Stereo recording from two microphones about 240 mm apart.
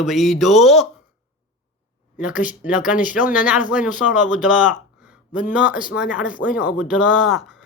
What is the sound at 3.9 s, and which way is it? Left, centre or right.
Speech, left.